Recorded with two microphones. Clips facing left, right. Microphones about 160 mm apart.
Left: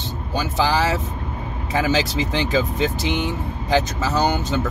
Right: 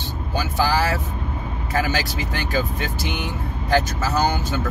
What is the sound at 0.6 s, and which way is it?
Speech, 20° left (ahead or behind).